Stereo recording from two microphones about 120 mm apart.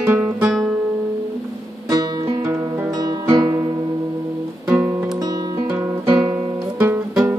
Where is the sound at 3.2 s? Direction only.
30° right (ahead or behind).